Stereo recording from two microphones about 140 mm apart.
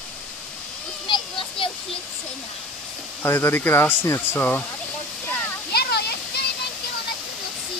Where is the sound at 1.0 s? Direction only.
35° left (ahead or behind).